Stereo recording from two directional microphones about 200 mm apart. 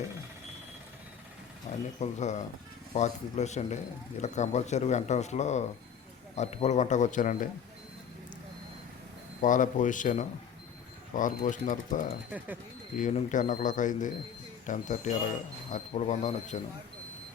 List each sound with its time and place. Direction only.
1.7 s a sound: 35° left (ahead or behind)
2.0 s speech: 35° left (ahead or behind)
9.4 s speech: 40° left (ahead or behind)